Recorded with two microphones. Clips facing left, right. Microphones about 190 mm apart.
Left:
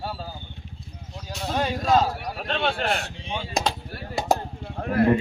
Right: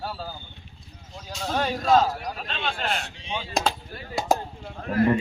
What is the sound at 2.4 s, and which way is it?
Speech, 55° left (ahead or behind).